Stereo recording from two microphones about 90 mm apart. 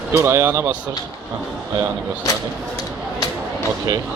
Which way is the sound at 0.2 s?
30° right (ahead or behind).